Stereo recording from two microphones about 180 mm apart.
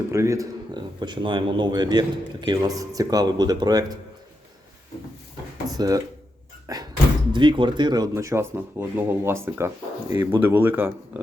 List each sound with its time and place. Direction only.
0.1 s speech: 15° right (ahead or behind)
5.7 s speech: 20° right (ahead or behind)
6.7 s door: 20° right (ahead or behind)
7.3 s speech: 25° right (ahead or behind)